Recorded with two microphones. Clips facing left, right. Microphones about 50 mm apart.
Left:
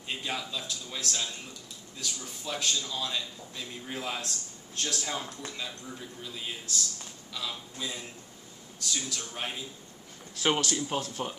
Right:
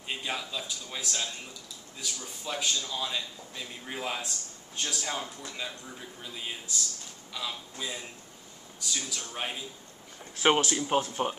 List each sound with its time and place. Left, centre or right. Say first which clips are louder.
0.1 s a man's voice: even; centre
10.3 s speech: right 3 dB; right